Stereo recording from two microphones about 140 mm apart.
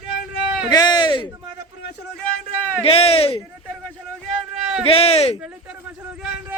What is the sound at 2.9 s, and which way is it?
Speech, 45° left (ahead or behind).